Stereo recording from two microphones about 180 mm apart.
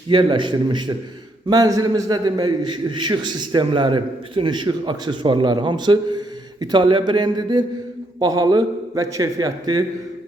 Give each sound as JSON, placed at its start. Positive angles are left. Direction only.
{"t": 0.1, "sound": "a man's voice", "side_deg": -25}